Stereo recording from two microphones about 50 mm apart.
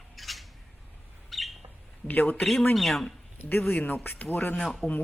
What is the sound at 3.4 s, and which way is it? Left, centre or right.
A man's voice, left.